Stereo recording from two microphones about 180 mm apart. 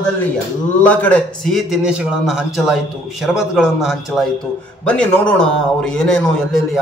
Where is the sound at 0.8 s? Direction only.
10° left (ahead or behind).